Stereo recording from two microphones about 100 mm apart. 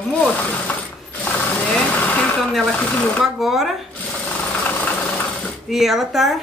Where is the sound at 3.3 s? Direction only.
5° right (ahead or behind).